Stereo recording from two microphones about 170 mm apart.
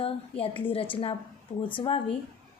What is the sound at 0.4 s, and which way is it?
A woman's voice, 30° left (ahead or behind).